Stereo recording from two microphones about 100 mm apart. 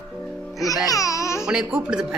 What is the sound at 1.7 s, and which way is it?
Speech, 5° right (ahead or behind).